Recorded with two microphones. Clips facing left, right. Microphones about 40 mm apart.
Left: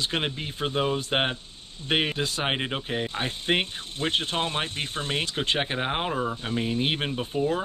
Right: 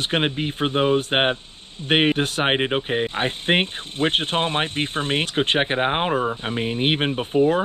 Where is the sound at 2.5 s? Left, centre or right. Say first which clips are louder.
Right 7 dB; right.